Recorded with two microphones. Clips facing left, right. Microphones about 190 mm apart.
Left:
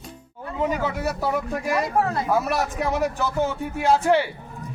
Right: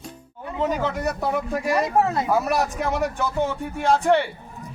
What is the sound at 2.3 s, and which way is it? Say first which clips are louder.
A man's voice: even; centre (ahead or behind).